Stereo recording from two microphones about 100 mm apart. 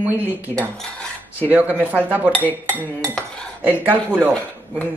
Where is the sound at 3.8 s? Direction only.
20° right (ahead or behind).